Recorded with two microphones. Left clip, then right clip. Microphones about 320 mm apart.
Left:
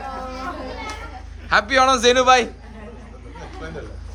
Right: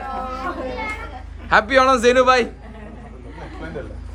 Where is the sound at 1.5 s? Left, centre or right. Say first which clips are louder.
Right 2 dB; centre.